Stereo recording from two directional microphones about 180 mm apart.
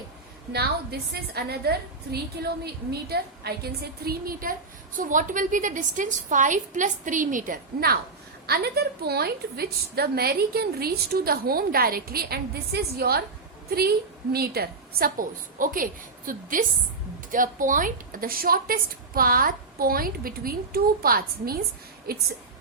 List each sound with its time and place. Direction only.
0.5 s a woman's voice: 60° right (ahead or behind)